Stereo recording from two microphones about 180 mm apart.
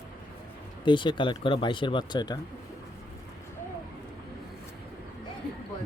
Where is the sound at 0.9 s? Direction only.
25° left (ahead or behind).